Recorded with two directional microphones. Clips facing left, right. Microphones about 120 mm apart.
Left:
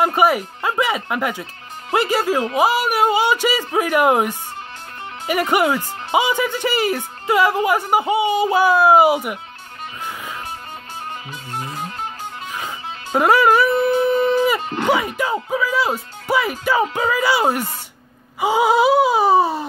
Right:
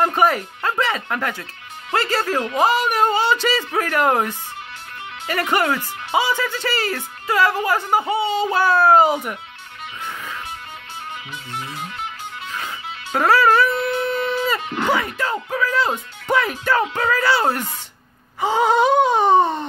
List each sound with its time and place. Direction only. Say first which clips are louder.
0.0 s speech: left 1 dB; 10° left (ahead or behind)
11.5 s music: left 3 dB; 40° left (ahead or behind)
12.5 s music: even; 15° left (ahead or behind)
13.7 s howl: left 5 dB; 40° left (ahead or behind)
14.6 s music: left 1 dB; 35° left (ahead or behind)
14.9 s speech: left 3 dB; 15° left (ahead or behind)
18.4 s a sound: left 1 dB; 10° left (ahead or behind)